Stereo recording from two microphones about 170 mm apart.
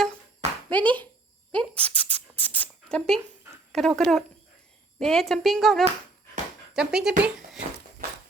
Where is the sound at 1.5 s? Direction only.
10° left (ahead or behind).